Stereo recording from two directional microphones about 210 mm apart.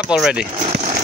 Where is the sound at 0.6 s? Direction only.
35° right (ahead or behind).